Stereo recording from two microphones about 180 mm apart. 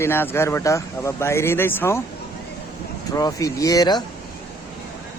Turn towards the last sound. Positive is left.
turn(degrees=20)  # may be behind; listen again after turning